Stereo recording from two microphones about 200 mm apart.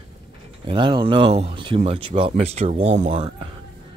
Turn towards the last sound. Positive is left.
turn(degrees=-30)  # may be behind; listen again after turning